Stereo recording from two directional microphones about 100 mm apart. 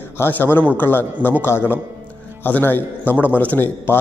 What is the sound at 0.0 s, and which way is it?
A man's voice, 20° left (ahead or behind).